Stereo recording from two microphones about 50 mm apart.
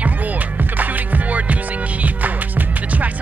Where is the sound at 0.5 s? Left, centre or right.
Right.